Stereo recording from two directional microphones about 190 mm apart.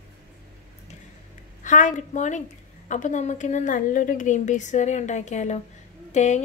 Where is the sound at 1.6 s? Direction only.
40° left (ahead or behind).